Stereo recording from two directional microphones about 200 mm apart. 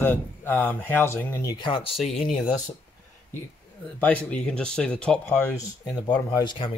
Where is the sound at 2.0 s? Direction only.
Centre (ahead or behind).